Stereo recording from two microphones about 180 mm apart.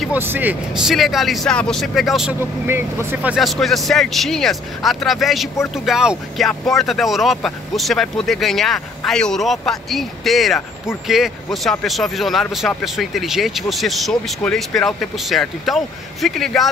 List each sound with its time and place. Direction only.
0.0 s speech: 10° right (ahead or behind)